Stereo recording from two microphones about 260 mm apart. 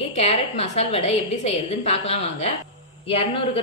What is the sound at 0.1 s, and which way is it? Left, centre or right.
A woman's voice, left.